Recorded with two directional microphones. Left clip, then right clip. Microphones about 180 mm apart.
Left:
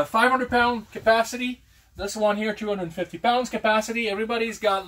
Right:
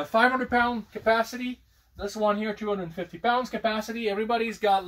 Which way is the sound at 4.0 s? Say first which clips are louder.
Left 1 dB; 45° right (ahead or behind).